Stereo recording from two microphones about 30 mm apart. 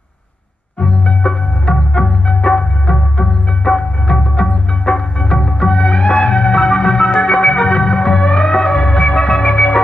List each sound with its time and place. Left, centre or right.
0.7 s music: left
8.7 s music: left
9.1 s music: left